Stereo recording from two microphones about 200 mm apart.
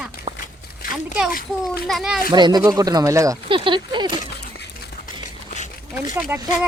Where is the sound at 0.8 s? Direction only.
45° left (ahead or behind).